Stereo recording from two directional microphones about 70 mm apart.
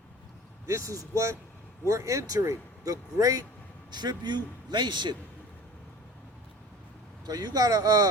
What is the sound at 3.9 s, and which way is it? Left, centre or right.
A man's voice, right.